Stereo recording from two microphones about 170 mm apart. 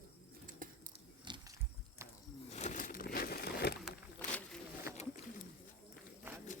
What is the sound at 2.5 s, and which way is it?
Crumpling, 45° left (ahead or behind).